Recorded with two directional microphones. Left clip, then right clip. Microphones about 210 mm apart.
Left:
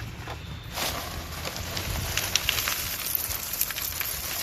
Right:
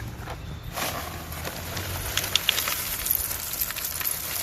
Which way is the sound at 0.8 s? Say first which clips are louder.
Even; centre (ahead or behind).